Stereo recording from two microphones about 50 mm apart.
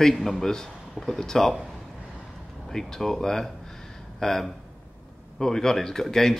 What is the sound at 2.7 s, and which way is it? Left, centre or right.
Speech, centre.